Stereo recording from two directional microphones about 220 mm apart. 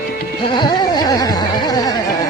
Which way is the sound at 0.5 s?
20° left (ahead or behind).